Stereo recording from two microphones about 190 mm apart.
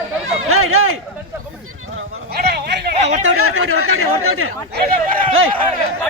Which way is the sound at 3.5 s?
90° right.